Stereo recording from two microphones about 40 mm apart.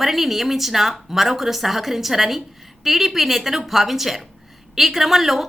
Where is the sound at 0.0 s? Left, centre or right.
Centre.